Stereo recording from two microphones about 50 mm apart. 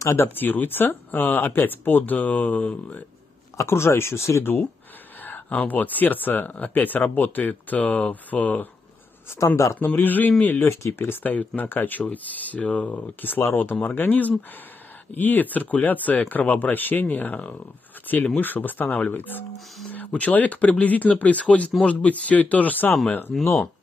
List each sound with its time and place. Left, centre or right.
0.0 s speech: left
0.3 s speech: left
3.5 s speech: left
5.2 s speech: left
9.8 s speech: left
10.6 s speech: left
11.2 s speech: left